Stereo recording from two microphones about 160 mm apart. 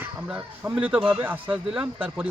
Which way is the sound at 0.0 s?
10° right (ahead or behind).